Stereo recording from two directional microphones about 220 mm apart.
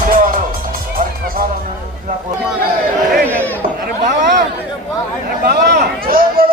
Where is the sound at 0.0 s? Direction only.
40° right (ahead or behind).